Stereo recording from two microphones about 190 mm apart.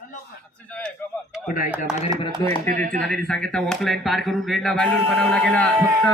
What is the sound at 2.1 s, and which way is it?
Speech, 20° right (ahead or behind).